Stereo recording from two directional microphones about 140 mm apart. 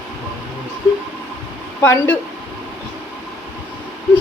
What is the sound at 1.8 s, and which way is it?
Speech, 15° left (ahead or behind).